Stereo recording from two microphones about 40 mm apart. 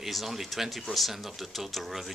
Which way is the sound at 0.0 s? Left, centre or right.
Centre.